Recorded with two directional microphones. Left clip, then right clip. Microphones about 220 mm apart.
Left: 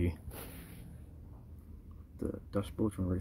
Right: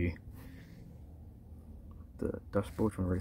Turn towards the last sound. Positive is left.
turn(degrees=0)  # may be behind; listen again after turning